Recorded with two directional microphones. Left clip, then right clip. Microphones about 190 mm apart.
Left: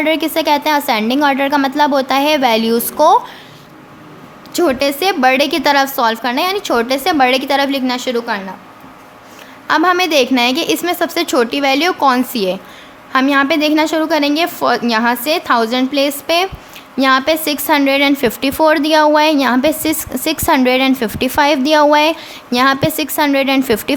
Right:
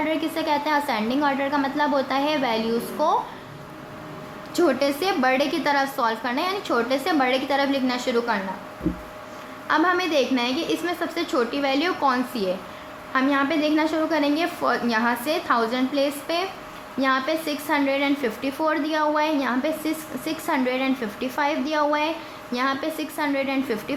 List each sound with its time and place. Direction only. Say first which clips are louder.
0.0 s a woman's voice: left 10 dB; 45° left (ahead or behind)
4.5 s a woman's voice: left 7 dB; 40° left (ahead or behind)
9.6 s a woman's voice: left 9 dB; 45° left (ahead or behind)